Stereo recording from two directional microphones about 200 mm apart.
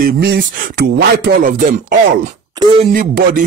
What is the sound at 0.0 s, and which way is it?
Speech, 50° right (ahead or behind).